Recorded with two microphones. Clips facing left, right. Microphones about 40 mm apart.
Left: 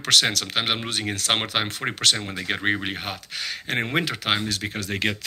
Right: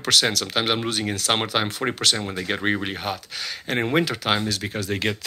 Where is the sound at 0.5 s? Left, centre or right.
Left.